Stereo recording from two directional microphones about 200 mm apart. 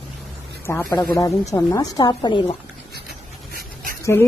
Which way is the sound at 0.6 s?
15° left (ahead or behind).